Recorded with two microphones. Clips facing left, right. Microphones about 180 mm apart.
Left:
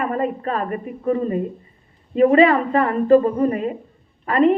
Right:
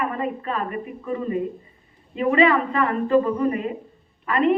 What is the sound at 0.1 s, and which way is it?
A man's voice, 40° left (ahead or behind).